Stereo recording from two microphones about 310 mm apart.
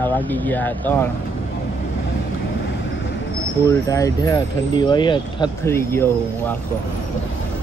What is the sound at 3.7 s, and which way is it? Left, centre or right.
Speech, centre.